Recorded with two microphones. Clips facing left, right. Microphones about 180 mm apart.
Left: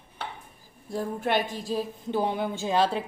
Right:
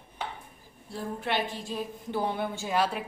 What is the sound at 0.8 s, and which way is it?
A woman's voice, 45° left (ahead or behind).